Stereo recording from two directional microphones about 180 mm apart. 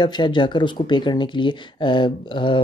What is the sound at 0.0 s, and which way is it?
Speech, 25° left (ahead or behind).